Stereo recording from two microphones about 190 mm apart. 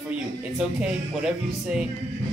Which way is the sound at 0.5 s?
5° right (ahead or behind).